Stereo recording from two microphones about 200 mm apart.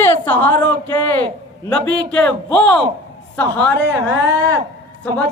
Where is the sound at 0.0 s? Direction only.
10° left (ahead or behind).